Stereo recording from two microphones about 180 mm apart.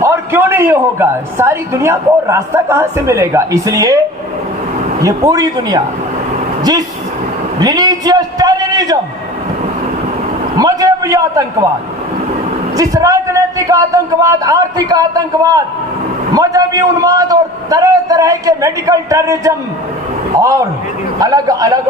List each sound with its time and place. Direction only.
0.0 s a man's voice: 15° right (ahead or behind)
10.6 s a sound: 20° right (ahead or behind)
12.7 s a man's voice: 20° right (ahead or behind)